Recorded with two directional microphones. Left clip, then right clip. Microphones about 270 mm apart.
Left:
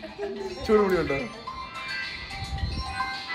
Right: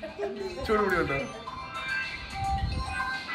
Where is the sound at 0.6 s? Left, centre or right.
Centre.